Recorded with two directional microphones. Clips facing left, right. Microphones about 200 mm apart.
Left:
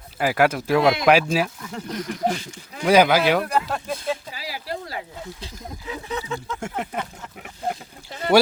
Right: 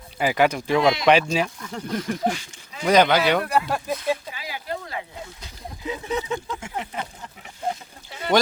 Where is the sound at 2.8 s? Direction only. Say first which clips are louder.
Left 1 dB; 5° left (ahead or behind).